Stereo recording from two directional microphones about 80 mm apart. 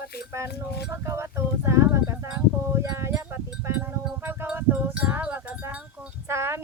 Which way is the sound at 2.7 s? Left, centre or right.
Right.